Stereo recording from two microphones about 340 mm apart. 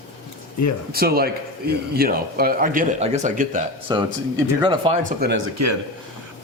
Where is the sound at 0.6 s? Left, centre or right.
Left.